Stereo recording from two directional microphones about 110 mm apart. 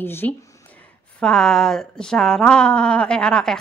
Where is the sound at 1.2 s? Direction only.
5° left (ahead or behind).